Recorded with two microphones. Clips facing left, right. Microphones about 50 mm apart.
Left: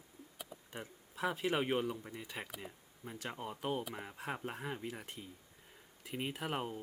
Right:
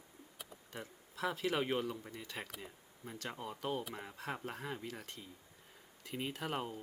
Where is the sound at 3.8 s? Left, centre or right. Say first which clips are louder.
Left 1 dB; centre.